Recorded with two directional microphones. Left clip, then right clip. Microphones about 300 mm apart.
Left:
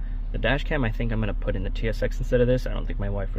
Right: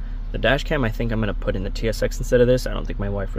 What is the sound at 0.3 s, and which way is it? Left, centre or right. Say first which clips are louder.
Speech: right 5 dB; right.